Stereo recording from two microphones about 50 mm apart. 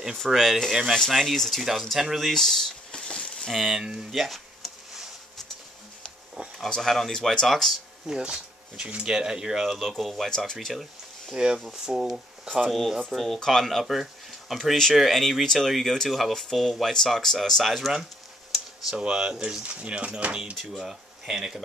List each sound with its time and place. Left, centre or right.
0.3 s speech: centre
0.9 s speech: centre
2.3 s speech: centre
2.9 s a sound: centre
3.4 s speech: centre
3.8 s speech: centre
4.1 s a sound: centre
6.6 s speech: centre
8.1 s speech: centre
9.8 s speech: centre
10.7 s a sound: centre
11.3 s speech: centre
18.9 s speech: centre
20.5 s speech: centre